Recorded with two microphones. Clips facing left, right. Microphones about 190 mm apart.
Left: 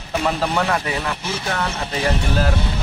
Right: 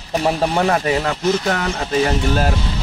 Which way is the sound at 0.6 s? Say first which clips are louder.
Right 4 dB; 35° right (ahead or behind).